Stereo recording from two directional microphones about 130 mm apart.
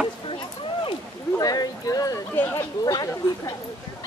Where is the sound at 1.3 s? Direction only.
30° left (ahead or behind).